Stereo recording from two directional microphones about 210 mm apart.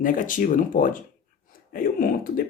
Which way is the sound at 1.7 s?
40° left (ahead or behind).